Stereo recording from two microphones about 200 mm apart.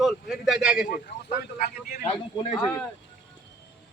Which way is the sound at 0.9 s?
40° left (ahead or behind).